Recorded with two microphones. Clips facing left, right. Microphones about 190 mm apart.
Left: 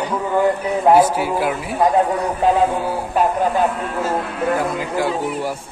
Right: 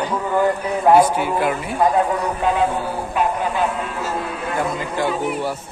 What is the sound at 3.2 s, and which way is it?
Speech, 40° left (ahead or behind).